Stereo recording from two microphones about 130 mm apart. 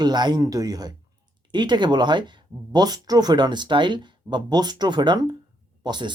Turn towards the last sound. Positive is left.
turn(degrees=-35)  # may be behind; listen again after turning